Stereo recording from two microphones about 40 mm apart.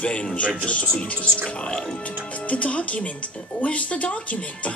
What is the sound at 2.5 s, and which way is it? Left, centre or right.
Speech, left.